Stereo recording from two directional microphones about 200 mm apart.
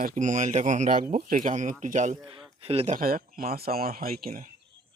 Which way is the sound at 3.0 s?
45° right (ahead or behind).